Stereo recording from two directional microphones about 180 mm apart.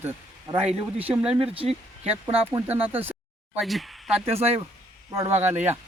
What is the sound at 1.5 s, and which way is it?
Speech, 30° right (ahead or behind).